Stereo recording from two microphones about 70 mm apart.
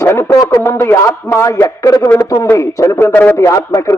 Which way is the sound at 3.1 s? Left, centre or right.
Left.